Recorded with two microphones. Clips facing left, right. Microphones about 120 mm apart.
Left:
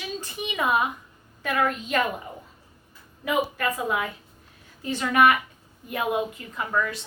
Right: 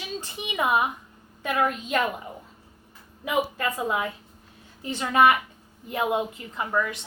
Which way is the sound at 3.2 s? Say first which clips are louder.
Left 1 dB; 20° right (ahead or behind).